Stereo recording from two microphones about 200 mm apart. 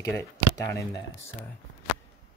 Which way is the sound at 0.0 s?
15° left (ahead or behind).